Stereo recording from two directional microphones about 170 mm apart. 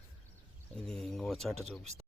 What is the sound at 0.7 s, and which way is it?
Speech, 5° left (ahead or behind).